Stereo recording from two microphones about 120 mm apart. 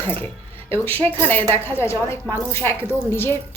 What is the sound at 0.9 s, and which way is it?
Speech, 50° right (ahead or behind).